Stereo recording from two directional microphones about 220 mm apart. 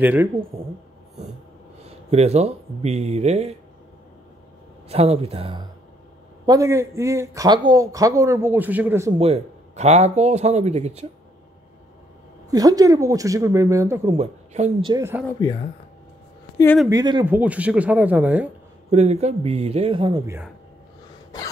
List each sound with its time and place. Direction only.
0.0 s speech: 5° right (ahead or behind)
2.0 s a man's voice: 30° right (ahead or behind)
4.8 s a man's voice: 30° right (ahead or behind); by 9.2 s 10° right (ahead or behind)
9.2 s a man's voice: 30° right (ahead or behind)
12.4 s speech: 15° right (ahead or behind)
14.1 s a man's voice: 30° right (ahead or behind); by 15.2 s 15° right (ahead or behind)
16.6 s speech: 15° left (ahead or behind)
16.9 s speech: 15° right (ahead or behind)
17.3 s speech: 5° right (ahead or behind)
18.9 s a man's voice: 30° right (ahead or behind)